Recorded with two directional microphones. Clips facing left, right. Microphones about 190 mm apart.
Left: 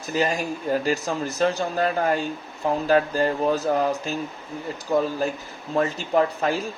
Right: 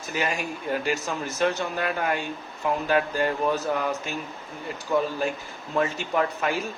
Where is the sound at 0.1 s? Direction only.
35° left (ahead or behind).